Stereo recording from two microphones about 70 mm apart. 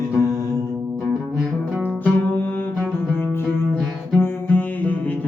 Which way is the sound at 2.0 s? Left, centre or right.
Left.